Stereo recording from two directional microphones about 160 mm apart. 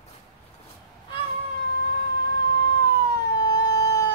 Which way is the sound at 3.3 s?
25° left (ahead or behind).